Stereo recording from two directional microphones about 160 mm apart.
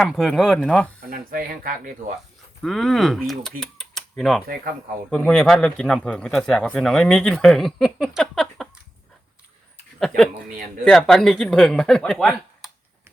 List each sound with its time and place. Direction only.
0.0 s speech: centre (ahead or behind)
1.1 s speech: 65° right (ahead or behind)
2.6 s speech: centre (ahead or behind)
3.6 s a sound: 5° left (ahead or behind)
4.2 s speech: centre (ahead or behind)
10.8 s speech: centre (ahead or behind)